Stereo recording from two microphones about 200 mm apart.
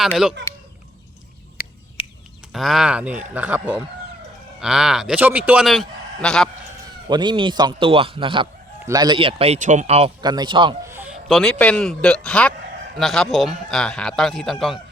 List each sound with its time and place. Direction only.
0.0 s a man's voice: centre (ahead or behind)
1.6 s a sound: 45° left (ahead or behind)
2.0 s bird: 25° left (ahead or behind)
2.5 s a man's voice: centre (ahead or behind)
7.1 s a man's voice: 20° right (ahead or behind)
10.2 s a man's voice: 20° right (ahead or behind)
10.8 s a man's voice: 10° right (ahead or behind)